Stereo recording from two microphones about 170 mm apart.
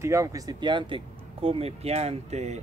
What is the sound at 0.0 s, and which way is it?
Speech, 20° right (ahead or behind).